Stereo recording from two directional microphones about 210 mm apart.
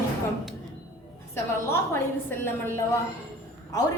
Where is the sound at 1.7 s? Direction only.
10° left (ahead or behind).